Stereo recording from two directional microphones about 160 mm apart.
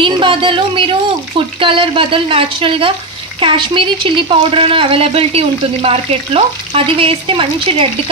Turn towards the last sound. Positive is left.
turn(degrees=-35)  # may be behind; listen again after turning